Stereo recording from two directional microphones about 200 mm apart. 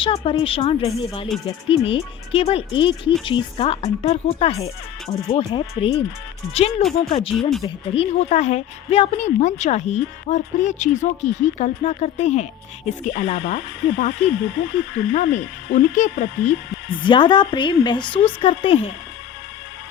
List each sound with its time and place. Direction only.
0.0 s a woman's voice: 25° left (ahead or behind)
14.1 s speech: 65° left (ahead or behind)
15.3 s a woman's voice: 35° left (ahead or behind)
16.3 s speech: 65° left (ahead or behind)
16.9 s speech: 25° left (ahead or behind)